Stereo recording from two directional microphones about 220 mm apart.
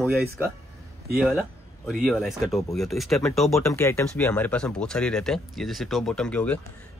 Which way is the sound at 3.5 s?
15° left (ahead or behind).